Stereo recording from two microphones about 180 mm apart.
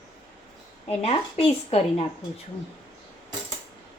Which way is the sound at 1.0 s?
35° left (ahead or behind).